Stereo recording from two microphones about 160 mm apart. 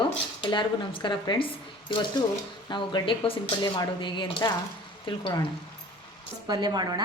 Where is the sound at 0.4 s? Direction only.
30° left (ahead or behind).